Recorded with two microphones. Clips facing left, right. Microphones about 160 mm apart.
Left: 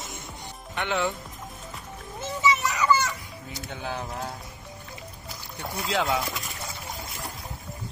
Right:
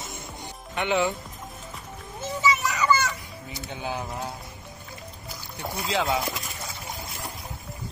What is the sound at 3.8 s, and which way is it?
Speech, 5° right (ahead or behind).